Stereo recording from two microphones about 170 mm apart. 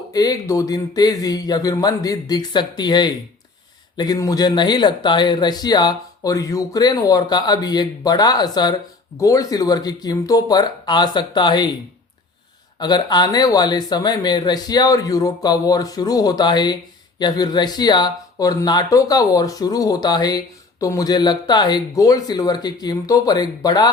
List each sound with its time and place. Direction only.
0.1 s speech: 20° left (ahead or behind)
12.8 s speech: 25° left (ahead or behind)